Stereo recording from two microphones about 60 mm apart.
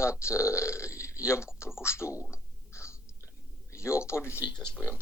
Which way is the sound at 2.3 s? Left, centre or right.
Left.